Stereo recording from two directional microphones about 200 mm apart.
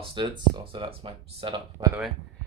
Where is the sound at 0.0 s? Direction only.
25° right (ahead or behind).